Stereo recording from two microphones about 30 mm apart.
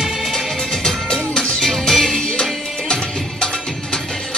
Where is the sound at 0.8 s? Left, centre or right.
Left.